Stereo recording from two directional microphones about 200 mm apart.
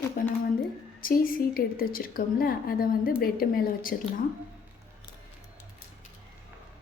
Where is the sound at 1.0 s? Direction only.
45° left (ahead or behind).